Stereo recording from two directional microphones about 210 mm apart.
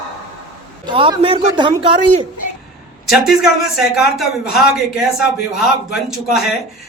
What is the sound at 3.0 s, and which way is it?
Speech, centre (ahead or behind).